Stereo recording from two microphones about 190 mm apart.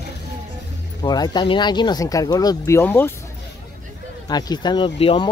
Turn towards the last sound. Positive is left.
turn(degrees=30)  # may be behind; listen again after turning